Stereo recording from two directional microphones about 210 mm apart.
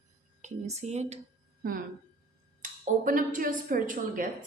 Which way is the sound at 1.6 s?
45° right (ahead or behind).